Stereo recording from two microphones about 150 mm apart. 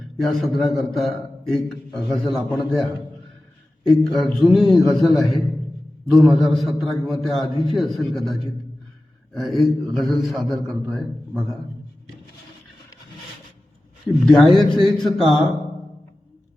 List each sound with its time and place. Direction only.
0.2 s a man's voice: centre (ahead or behind)
3.8 s a man's voice: 5° left (ahead or behind)
9.4 s a man's voice: centre (ahead or behind)
14.3 s a man's voice: centre (ahead or behind)